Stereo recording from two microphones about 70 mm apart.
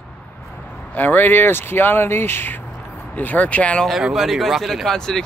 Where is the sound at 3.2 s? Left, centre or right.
Left.